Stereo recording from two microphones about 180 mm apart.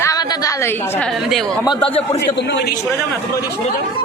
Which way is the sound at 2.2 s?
70° left (ahead or behind).